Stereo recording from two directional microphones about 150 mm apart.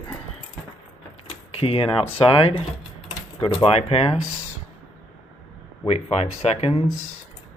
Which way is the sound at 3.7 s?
45° left (ahead or behind).